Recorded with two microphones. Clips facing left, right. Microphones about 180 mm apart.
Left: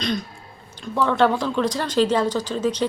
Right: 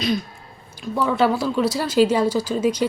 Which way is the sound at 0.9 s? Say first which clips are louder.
Even; 5° right (ahead or behind).